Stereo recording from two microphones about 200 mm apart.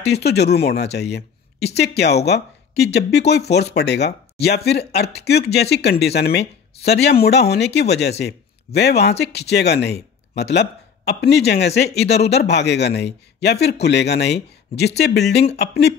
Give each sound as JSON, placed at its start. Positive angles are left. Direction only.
{"t": 0.0, "sound": "speech", "side_deg": 55}